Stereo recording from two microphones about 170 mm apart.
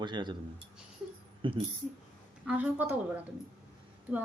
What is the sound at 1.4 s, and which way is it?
Speech, 30° right (ahead or behind).